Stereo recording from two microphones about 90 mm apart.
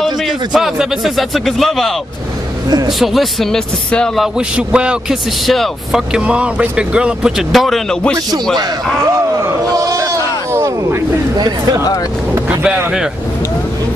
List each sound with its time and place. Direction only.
0.0 s speech: 5° right (ahead or behind)
3.0 s a man's voice: centre (ahead or behind)
4.6 s speech: 10° right (ahead or behind)
5.5 s speech: centre (ahead or behind)
9.8 s a sound: 40° right (ahead or behind)
11.3 s speech: 45° right (ahead or behind)
12.4 s speech: 10° right (ahead or behind)